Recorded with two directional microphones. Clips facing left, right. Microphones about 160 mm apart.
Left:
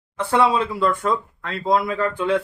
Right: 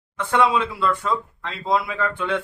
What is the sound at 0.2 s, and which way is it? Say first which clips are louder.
Speech: left 1 dB; 35° left (ahead or behind).